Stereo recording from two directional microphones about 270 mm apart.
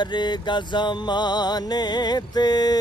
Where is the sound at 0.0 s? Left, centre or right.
Centre.